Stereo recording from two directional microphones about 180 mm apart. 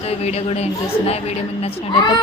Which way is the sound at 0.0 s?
35° left (ahead or behind).